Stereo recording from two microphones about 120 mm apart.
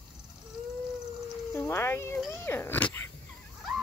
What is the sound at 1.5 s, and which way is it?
Speech, 20° left (ahead or behind).